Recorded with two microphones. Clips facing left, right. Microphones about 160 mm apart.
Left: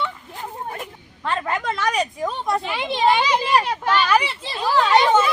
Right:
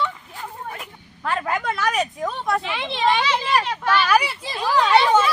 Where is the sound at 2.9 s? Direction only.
40° left (ahead or behind).